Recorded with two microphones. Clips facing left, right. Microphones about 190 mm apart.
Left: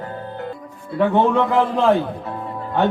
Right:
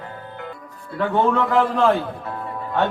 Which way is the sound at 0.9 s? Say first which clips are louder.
Left 3 dB; 15° left (ahead or behind).